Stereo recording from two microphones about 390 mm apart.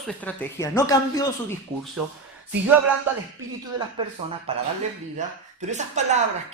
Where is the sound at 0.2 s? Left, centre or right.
Centre.